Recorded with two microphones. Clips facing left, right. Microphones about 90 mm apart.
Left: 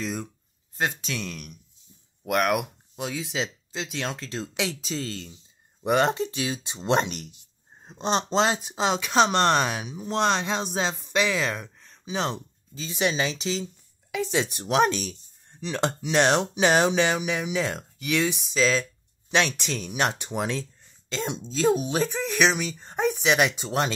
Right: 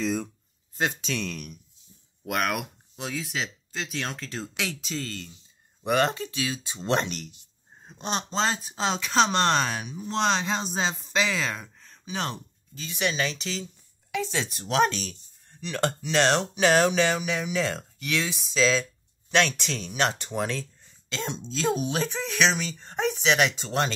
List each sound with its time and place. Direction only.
0.0 s speech: 5° left (ahead or behind)
3.3 s speech: 20° left (ahead or behind)
7.8 s speech: 30° left (ahead or behind)
8.6 s speech: 10° left (ahead or behind)
10.7 s speech: 5° left (ahead or behind); by 13.6 s 25° left (ahead or behind)
14.1 s speech: 10° left (ahead or behind)